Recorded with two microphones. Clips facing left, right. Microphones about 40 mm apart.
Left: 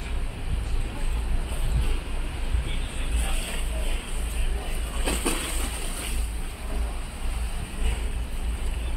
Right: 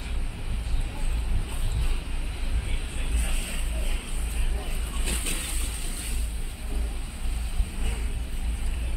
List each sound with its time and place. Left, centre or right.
3.2 s vehicle: centre
4.6 s vehicle: centre